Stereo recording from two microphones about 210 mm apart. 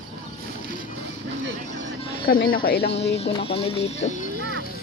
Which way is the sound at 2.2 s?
45° left (ahead or behind).